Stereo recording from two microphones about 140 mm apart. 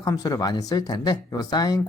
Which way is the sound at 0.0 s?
25° left (ahead or behind).